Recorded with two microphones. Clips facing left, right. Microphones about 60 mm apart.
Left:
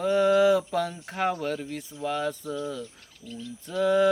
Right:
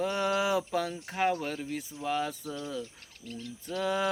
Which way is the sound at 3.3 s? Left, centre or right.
Right.